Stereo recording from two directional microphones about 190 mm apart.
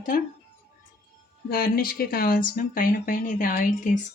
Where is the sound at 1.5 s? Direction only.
50° left (ahead or behind).